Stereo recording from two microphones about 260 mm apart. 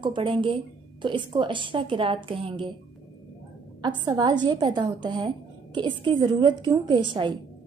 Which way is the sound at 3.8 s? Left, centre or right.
Centre.